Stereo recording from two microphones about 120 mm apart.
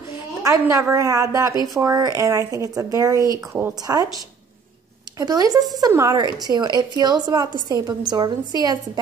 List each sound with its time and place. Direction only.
0.4 s a woman's voice: 25° right (ahead or behind)
5.2 s a woman's voice: 30° right (ahead or behind)